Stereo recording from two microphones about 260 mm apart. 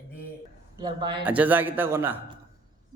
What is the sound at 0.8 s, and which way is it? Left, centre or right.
Speech, centre.